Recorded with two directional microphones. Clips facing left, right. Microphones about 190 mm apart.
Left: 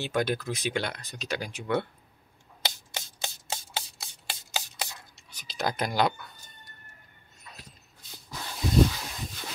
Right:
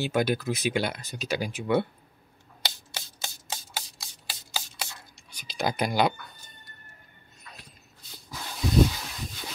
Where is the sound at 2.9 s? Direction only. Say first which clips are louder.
Left 2 dB; 20° left (ahead or behind).